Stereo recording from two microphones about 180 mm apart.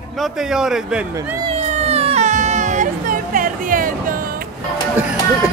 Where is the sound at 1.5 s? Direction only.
35° right (ahead or behind).